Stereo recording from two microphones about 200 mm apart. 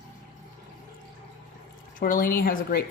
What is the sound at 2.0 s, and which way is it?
Speech, 45° left (ahead or behind).